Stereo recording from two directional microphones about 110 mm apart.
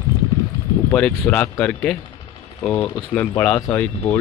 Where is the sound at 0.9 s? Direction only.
10° left (ahead or behind).